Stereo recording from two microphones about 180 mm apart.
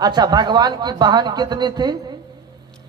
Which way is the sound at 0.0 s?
20° right (ahead or behind).